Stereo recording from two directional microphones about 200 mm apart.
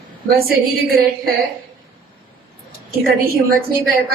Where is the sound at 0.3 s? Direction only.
50° right (ahead or behind).